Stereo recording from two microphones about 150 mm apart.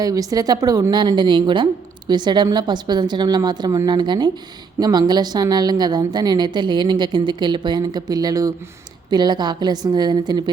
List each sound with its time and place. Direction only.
0.0 s a woman's voice: 25° right (ahead or behind)